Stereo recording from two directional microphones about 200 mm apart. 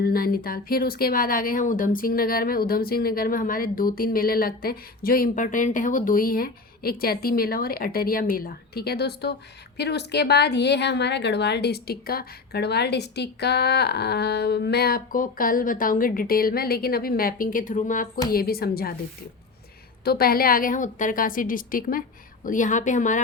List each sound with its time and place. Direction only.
0.0 s a woman's voice: 50° left (ahead or behind)
20.1 s a woman's voice: 50° left (ahead or behind)